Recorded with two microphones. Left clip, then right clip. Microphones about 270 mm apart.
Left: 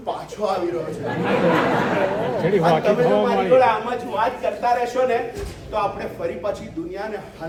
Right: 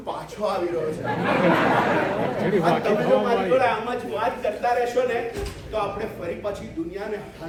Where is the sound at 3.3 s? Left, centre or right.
Centre.